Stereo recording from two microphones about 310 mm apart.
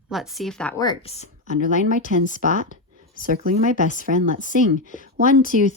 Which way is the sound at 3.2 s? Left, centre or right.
Right.